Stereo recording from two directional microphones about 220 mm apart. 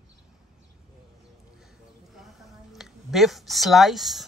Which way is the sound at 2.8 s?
Centre (ahead or behind).